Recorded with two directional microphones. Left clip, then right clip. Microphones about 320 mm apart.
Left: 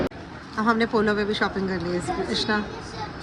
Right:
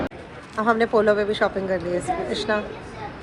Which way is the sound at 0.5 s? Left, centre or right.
Centre.